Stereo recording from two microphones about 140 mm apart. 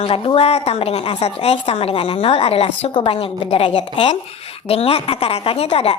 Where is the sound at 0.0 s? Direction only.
45° left (ahead or behind).